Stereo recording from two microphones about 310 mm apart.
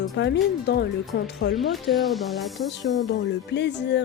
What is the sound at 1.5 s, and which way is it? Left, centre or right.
Speech, centre.